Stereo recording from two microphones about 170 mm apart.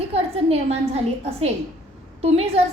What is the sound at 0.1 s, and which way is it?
A woman's voice, 35° right (ahead or behind).